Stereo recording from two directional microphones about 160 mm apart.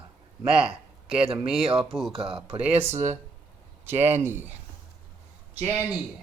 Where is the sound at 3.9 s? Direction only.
40° right (ahead or behind).